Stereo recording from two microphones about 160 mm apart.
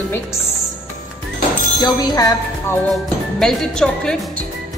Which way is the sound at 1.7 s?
25° left (ahead or behind).